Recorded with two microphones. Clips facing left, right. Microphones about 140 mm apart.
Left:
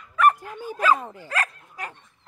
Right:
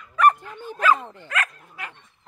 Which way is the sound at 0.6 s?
10° left (ahead or behind).